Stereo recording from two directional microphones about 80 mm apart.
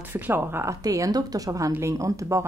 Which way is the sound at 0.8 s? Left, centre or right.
Right.